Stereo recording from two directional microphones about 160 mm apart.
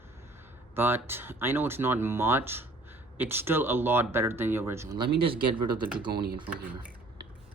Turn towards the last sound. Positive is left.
turn(degrees=-10)  # may be behind; listen again after turning